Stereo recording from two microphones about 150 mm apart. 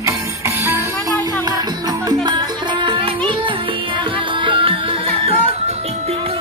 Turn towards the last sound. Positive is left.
turn(degrees=-40)  # may be behind; listen again after turning